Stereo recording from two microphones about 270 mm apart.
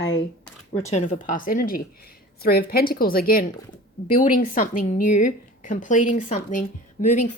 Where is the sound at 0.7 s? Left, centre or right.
Left.